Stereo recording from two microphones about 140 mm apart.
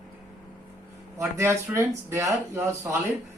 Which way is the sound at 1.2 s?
20° right (ahead or behind).